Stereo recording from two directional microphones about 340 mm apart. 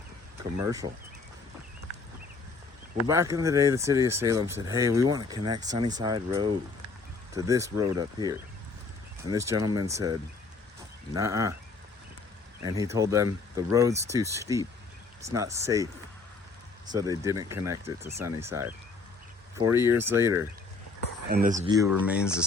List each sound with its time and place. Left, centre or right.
0.6 s speech: centre
3.0 s speech: centre
12.6 s speech: centre
16.9 s speech: centre
21.2 s speech: right
21.7 s speech: centre